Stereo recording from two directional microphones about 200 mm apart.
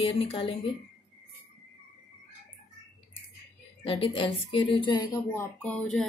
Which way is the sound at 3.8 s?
25° left (ahead or behind).